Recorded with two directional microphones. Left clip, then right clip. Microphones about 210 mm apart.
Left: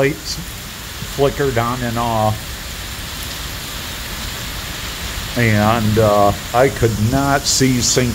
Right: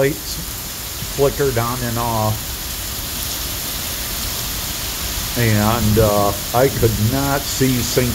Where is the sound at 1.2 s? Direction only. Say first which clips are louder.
Left 1 dB; 15° left (ahead or behind).